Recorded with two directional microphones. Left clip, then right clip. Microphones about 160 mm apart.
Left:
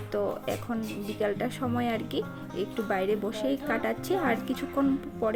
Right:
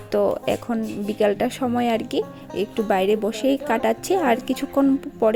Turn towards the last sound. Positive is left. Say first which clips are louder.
# right 8 dB
turn(degrees=-50)  # may be behind; listen again after turning